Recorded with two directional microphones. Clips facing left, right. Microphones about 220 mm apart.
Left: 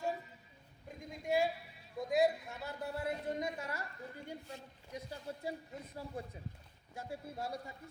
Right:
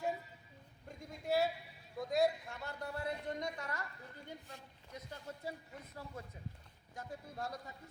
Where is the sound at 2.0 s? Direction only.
Centre (ahead or behind).